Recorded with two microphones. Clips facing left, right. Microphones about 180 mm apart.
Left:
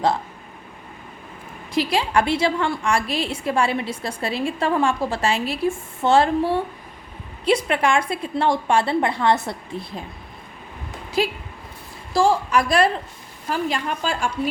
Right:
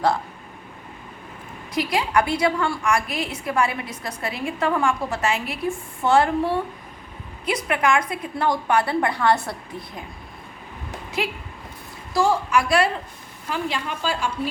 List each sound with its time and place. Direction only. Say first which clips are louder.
1.7 s a woman's voice: left 1 dB; 30° left (ahead or behind)
7.4 s a woman's voice: left 3 dB; 30° left (ahead or behind)
11.2 s a woman's voice: left 5 dB; 35° left (ahead or behind)